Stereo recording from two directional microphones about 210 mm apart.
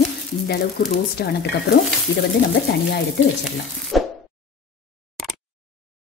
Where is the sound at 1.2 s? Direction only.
50° left (ahead or behind).